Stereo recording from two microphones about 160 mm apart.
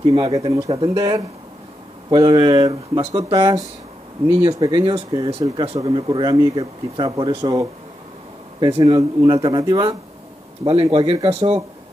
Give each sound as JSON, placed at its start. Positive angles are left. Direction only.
{"t": 0.1, "sound": "speech", "side_deg": -30}
{"t": 0.9, "sound": "speech", "side_deg": -20}
{"t": 6.5, "sound": "speech", "side_deg": -35}